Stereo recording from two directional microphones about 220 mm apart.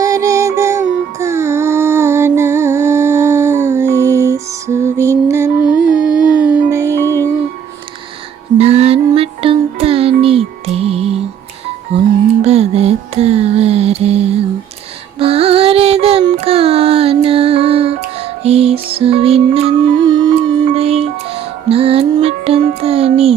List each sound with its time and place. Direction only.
0.0 s music: 15° right (ahead or behind)
5.9 s a sound: 5° right (ahead or behind)
6.7 s music: 15° right (ahead or behind)
8.5 s music: 30° right (ahead or behind)